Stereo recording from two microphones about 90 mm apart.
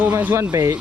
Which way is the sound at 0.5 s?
40° right (ahead or behind).